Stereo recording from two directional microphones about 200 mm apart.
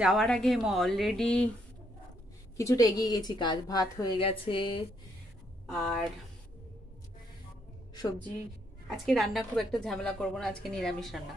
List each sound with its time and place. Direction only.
0.0 s a woman's voice: centre (ahead or behind)
2.5 s a woman's voice: 15° left (ahead or behind)
5.7 s a woman's voice: centre (ahead or behind)
8.8 s a woman's voice: centre (ahead or behind)